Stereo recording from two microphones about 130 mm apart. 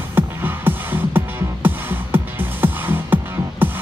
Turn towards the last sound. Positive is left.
turn(degrees=-15)  # may be behind; listen again after turning